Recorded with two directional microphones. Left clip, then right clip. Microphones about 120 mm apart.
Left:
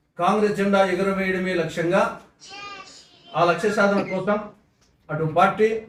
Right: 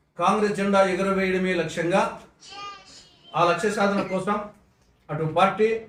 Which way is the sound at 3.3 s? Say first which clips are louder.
Left 1 dB; centre (ahead or behind).